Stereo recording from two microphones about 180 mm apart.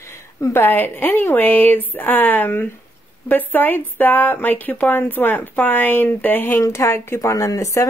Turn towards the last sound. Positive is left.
turn(degrees=15)  # may be behind; listen again after turning